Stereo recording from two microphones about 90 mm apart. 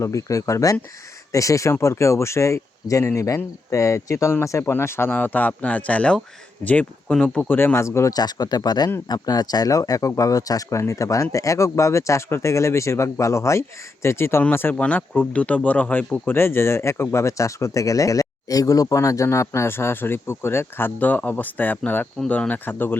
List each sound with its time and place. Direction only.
0.0 s speech: 35° left (ahead or behind); by 7.4 s 15° left (ahead or behind)
7.4 s speech: 25° left (ahead or behind)
8.1 s speech: 50° left (ahead or behind); by 23.0 s 20° left (ahead or behind)